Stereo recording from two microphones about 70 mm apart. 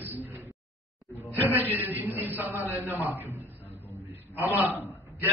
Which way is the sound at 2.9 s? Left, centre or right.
Left.